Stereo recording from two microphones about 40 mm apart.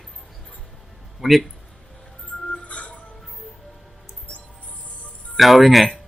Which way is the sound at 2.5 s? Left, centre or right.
Left.